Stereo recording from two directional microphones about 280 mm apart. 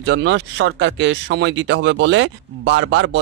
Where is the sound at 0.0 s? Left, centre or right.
Right.